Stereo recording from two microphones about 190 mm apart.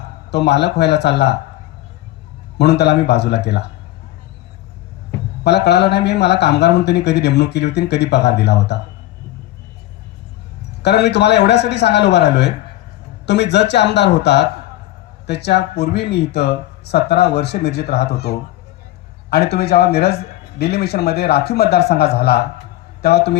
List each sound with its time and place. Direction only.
0.3 s speech: 60° left (ahead or behind)
2.6 s speech: 60° left (ahead or behind)
5.4 s speech: 60° left (ahead or behind)
10.8 s a man's voice: 60° left (ahead or behind)